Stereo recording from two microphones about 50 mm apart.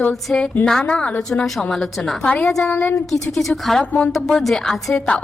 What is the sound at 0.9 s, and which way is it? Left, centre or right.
Speech, left.